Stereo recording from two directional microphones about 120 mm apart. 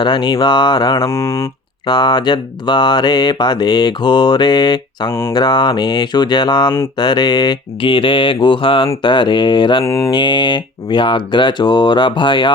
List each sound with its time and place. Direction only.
0.0 s mantra: 40° left (ahead or behind)
1.0 s speech: 20° left (ahead or behind)
1.9 s mantra: 40° left (ahead or behind)
9.8 s speech: 20° left (ahead or behind)
10.1 s mantra: 40° left (ahead or behind)